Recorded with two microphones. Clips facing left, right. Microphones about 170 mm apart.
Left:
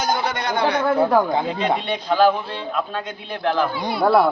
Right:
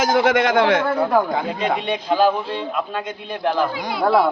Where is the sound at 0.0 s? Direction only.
90° right.